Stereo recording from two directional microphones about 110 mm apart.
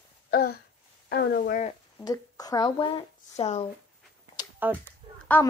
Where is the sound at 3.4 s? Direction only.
75° left (ahead or behind).